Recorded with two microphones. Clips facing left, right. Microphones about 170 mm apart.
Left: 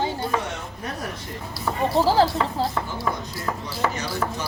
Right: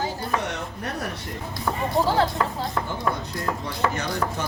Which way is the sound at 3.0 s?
5° left (ahead or behind).